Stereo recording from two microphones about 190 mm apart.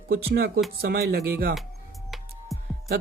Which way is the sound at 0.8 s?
55° right (ahead or behind).